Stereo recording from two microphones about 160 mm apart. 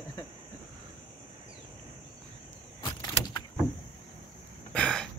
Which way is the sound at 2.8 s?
25° left (ahead or behind).